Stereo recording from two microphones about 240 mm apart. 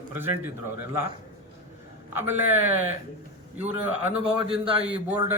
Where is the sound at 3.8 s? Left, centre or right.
Centre.